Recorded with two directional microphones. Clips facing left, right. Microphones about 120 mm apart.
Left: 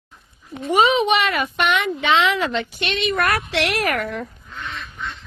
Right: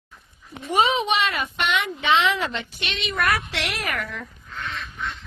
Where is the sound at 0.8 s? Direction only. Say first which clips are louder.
Left 4 dB; 80° left.